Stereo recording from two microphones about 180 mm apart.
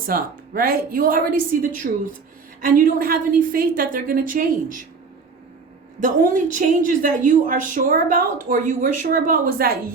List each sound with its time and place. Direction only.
0.1 s a woman's voice: 55° right (ahead or behind)
6.0 s a woman's voice: 45° right (ahead or behind)